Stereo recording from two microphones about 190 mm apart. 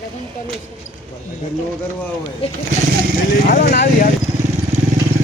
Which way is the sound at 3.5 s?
55° left (ahead or behind).